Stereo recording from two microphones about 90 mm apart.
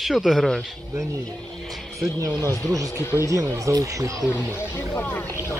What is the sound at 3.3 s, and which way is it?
Speech, 40° right (ahead or behind).